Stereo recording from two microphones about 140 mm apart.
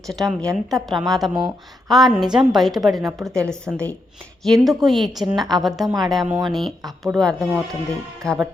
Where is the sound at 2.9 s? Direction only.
25° right (ahead or behind).